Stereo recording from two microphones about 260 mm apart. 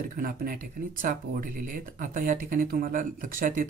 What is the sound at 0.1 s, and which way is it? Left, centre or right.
Speech, right.